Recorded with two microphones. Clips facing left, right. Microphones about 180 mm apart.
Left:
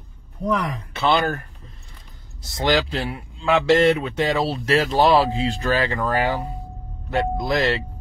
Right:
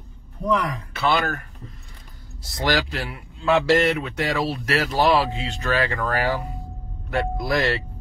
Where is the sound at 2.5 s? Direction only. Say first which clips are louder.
Left 3 dB; 20° left (ahead or behind).